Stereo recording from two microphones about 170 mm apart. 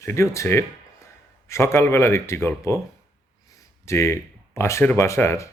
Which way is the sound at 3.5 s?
15° left (ahead or behind).